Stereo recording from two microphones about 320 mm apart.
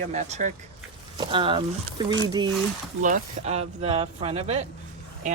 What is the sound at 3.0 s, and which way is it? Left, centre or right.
Speech, right.